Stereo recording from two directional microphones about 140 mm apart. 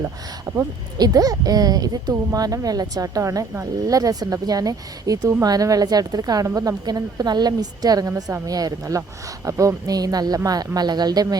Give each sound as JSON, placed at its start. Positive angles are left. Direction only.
{"t": 0.0, "sound": "speech", "side_deg": -25}